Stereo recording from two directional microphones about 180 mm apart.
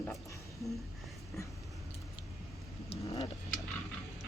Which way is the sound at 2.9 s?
30° left (ahead or behind).